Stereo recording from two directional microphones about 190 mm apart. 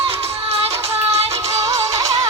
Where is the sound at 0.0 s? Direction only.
30° right (ahead or behind).